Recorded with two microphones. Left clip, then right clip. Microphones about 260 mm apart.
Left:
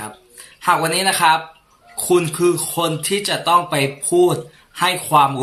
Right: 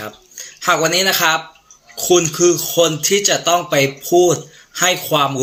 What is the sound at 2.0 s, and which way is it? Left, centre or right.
Speech, left.